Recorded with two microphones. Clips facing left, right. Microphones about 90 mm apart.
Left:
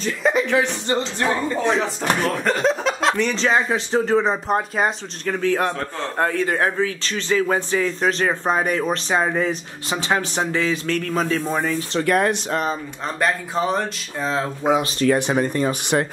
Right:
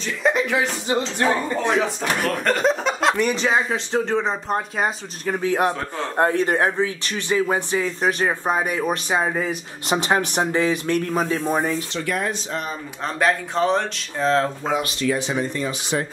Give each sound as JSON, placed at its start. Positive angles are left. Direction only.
{"t": 0.0, "sound": "speech", "side_deg": 0}
{"t": 2.0, "sound": "speech", "side_deg": 0}
{"t": 5.2, "sound": "speech", "side_deg": -15}
{"t": 6.1, "sound": "speech", "side_deg": -20}
{"t": 9.8, "sound": "speech", "side_deg": -20}
{"t": 11.9, "sound": "speech", "side_deg": 50}
{"t": 13.0, "sound": "speech", "side_deg": 0}
{"t": 14.6, "sound": "speech", "side_deg": 20}
{"t": 15.0, "sound": "speech", "side_deg": 55}